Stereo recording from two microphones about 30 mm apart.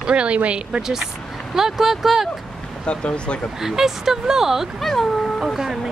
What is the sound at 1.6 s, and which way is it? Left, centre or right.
Speech, centre.